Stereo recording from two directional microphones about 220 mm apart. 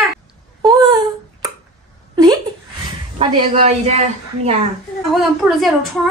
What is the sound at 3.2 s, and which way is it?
A woman's voice, 25° right (ahead or behind).